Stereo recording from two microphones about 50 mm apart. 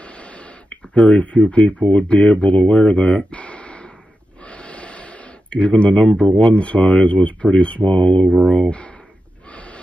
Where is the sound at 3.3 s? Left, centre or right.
Left.